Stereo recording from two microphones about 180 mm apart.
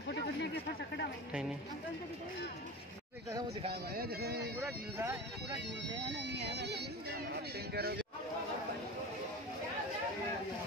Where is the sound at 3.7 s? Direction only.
60° right (ahead or behind).